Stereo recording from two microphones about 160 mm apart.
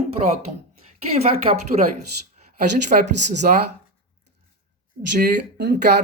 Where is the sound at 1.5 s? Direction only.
35° right (ahead or behind).